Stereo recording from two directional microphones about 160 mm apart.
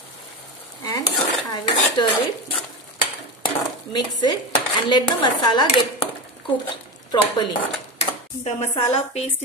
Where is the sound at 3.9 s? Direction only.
30° left (ahead or behind).